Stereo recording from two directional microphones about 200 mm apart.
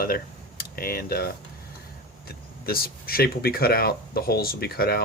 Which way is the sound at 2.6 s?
50° left (ahead or behind).